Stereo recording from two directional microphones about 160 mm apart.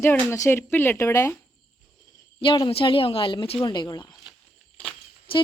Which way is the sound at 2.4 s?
30° left (ahead or behind).